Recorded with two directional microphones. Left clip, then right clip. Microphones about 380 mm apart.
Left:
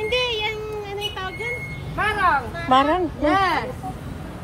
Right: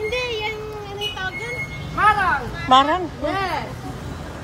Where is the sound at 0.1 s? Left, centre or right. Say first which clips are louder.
Left 2 dB; left.